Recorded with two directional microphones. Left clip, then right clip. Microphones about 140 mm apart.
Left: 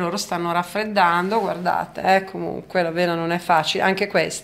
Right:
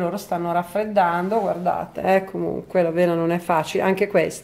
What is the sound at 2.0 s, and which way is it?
Speech, 40° right (ahead or behind).